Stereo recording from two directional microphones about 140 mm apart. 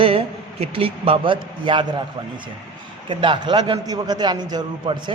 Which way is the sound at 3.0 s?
35° right (ahead or behind).